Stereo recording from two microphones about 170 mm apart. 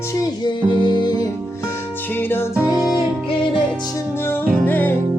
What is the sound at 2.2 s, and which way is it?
Music, 15° left (ahead or behind).